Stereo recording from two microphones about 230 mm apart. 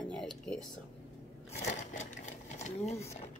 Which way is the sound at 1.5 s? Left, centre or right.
Left.